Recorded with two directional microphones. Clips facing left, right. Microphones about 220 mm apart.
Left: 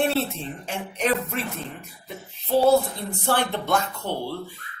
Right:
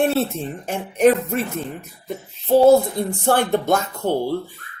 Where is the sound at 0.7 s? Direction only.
45° right (ahead or behind).